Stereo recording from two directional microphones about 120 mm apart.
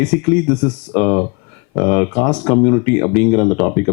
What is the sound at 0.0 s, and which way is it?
A man's voice, 10° left (ahead or behind).